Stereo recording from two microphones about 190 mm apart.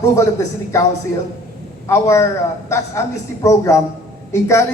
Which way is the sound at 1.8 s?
15° left (ahead or behind).